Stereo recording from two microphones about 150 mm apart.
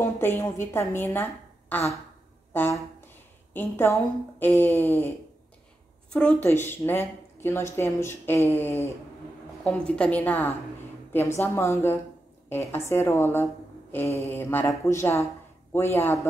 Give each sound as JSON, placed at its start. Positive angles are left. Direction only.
{"t": 0.0, "sound": "a woman's voice", "side_deg": 15}